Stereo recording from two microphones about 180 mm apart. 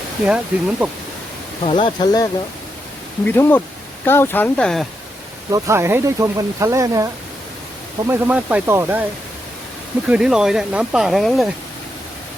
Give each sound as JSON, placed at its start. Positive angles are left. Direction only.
{"t": 0.3, "sound": "speech", "side_deg": -5}
{"t": 1.6, "sound": "speech", "side_deg": 30}
{"t": 3.2, "sound": "speech", "side_deg": 10}
{"t": 5.5, "sound": "speech", "side_deg": -20}
{"t": 10.1, "sound": "speech", "side_deg": -5}